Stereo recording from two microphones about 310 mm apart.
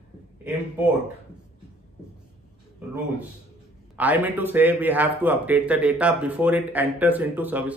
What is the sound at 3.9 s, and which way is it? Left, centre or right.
A man's voice, centre.